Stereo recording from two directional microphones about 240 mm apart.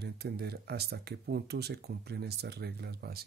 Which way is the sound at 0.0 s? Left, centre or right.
Right.